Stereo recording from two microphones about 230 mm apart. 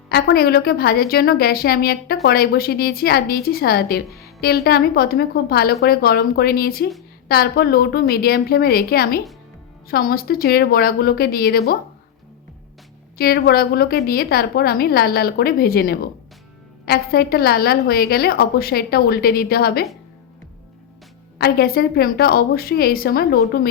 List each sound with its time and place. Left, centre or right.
0.1 s a woman's voice: left
13.1 s a woman's voice: left
21.3 s a woman's voice: left